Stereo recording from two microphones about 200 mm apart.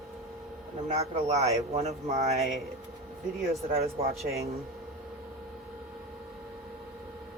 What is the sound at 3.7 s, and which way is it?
Speech, 30° right (ahead or behind).